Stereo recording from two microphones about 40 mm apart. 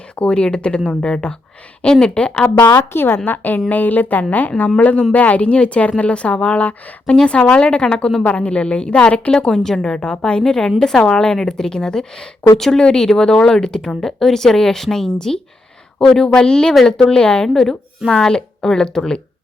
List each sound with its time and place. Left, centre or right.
0.2 s speech: left
2.6 s a woman's voice: left
3.2 s a woman's voice: left
9.5 s a woman's voice: centre
13.8 s a woman's voice: centre
18.3 s speech: centre